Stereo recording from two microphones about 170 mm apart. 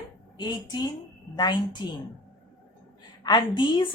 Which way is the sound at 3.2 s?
25° left (ahead or behind).